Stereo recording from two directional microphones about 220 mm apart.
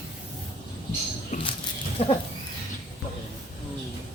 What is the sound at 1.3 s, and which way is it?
Speech, 35° left (ahead or behind).